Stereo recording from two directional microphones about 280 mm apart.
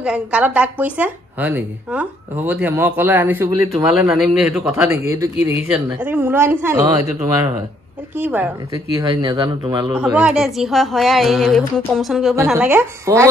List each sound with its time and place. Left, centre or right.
0.0 s a woman's voice: centre
5.4 s speech: left
5.7 s speech: centre
8.2 s speech: centre
10.0 s a woman's voice: centre